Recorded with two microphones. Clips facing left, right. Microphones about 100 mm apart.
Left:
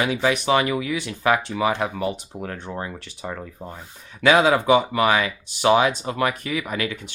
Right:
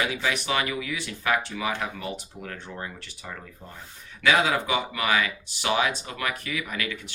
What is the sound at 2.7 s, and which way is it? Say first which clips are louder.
Speech: left 6 dB; 45° left (ahead or behind).